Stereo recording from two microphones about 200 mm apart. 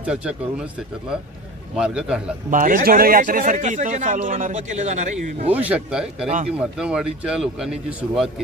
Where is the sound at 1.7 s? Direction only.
5° right (ahead or behind).